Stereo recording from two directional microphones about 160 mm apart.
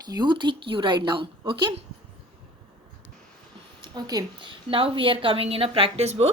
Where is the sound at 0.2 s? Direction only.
30° right (ahead or behind).